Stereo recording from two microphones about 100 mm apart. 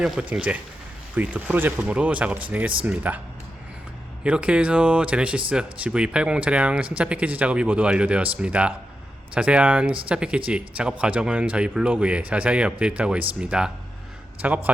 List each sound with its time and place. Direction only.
0.0 s speech: 10° right (ahead or behind)
4.2 s speech: 10° right (ahead or behind)